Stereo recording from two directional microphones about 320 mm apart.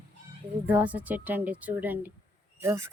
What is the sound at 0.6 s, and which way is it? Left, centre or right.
A woman's voice, centre.